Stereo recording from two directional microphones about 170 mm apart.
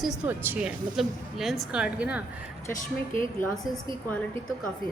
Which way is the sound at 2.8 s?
50° left (ahead or behind).